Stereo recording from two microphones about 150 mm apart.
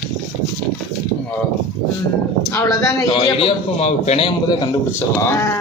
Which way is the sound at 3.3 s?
40° left (ahead or behind).